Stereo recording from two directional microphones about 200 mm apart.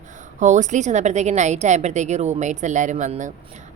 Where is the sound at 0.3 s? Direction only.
35° right (ahead or behind).